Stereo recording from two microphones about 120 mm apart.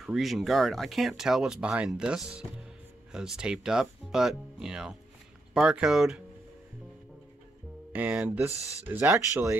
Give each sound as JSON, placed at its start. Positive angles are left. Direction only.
{"t": 0.0, "sound": "speech", "side_deg": 0}
{"t": 7.9, "sound": "speech", "side_deg": -15}